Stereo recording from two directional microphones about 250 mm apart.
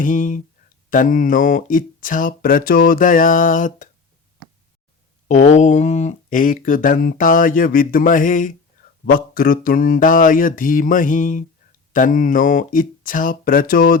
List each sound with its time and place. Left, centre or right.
0.0 s speech: left
5.3 s speech: left